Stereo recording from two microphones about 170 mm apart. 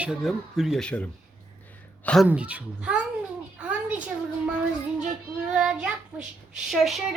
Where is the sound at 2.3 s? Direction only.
10° right (ahead or behind).